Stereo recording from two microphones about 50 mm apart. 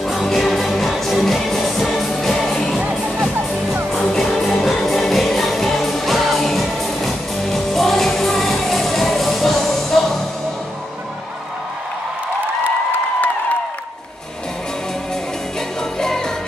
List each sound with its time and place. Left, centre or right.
0.0 s music: centre
2.8 s music: right
3.9 s music: centre
16.0 s music: centre